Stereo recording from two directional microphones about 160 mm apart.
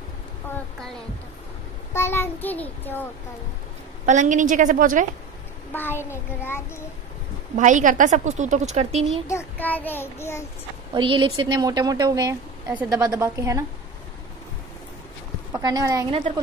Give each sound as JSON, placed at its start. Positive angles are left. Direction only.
{"t": 2.0, "sound": "a child's voice", "side_deg": 15}
{"t": 4.0, "sound": "a woman's voice", "side_deg": -50}
{"t": 5.7, "sound": "a child's voice", "side_deg": 10}
{"t": 7.5, "sound": "a woman's voice", "side_deg": -50}
{"t": 9.3, "sound": "a child's voice", "side_deg": 15}
{"t": 10.9, "sound": "a woman's voice", "side_deg": -30}
{"t": 15.5, "sound": "a woman's voice", "side_deg": -25}